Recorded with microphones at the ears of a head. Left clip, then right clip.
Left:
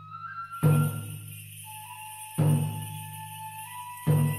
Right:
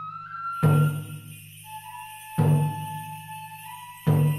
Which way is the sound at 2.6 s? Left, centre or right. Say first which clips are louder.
Right 6 dB; right.